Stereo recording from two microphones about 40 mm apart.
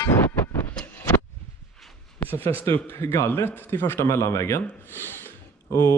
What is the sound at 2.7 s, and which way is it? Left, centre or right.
A man's voice, left.